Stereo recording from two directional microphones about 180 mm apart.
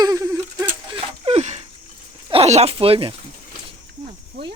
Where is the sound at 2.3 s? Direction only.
35° right (ahead or behind).